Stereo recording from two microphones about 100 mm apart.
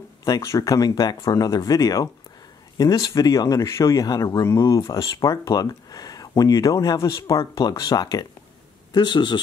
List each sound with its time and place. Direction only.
0.2 s speech: 30° left (ahead or behind); by 9.4 s 50° left (ahead or behind)